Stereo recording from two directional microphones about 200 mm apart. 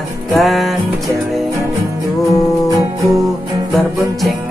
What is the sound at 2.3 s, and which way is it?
Music, 15° right (ahead or behind).